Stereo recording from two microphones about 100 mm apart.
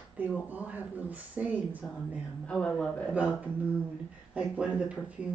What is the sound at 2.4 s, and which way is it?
Speech, 10° left (ahead or behind).